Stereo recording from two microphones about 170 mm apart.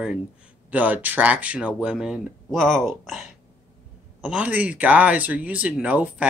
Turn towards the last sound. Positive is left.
turn(degrees=-10)  # may be behind; listen again after turning